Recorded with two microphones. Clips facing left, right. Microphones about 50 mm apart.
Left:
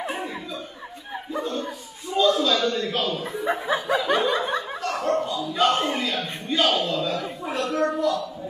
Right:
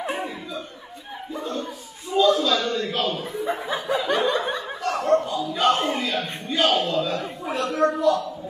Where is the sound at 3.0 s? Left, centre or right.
Right.